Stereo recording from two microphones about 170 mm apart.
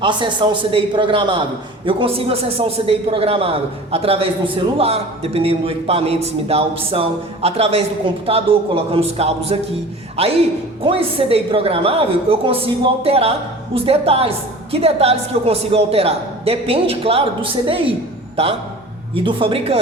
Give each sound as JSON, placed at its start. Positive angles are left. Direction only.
{"t": 0.0, "sound": "a man's voice", "side_deg": -25}